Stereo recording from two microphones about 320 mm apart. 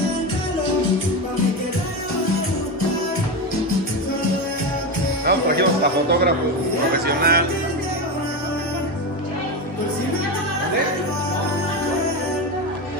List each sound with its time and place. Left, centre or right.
5.2 s speech: right